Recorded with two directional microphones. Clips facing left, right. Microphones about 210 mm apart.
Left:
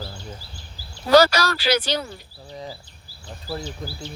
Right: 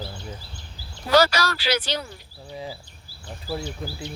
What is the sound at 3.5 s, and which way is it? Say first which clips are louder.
Speech: right 1 dB; 10° right (ahead or behind).